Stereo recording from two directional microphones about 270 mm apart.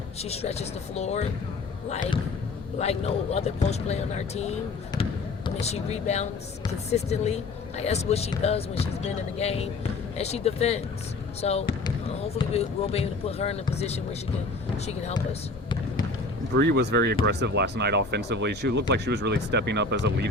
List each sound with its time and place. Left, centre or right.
0.2 s speech: left
2.7 s speech: left
5.6 s speech: left
16.6 s speech: right